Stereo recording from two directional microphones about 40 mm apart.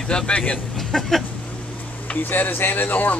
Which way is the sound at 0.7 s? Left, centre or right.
Centre.